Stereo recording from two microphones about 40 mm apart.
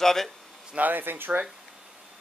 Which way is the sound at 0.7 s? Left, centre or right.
Right.